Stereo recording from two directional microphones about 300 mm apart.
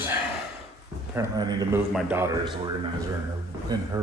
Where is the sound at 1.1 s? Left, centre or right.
Centre.